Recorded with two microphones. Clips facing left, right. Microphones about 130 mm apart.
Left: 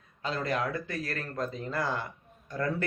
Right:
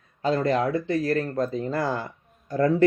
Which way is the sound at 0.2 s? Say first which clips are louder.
Right 8 dB; 35° right (ahead or behind).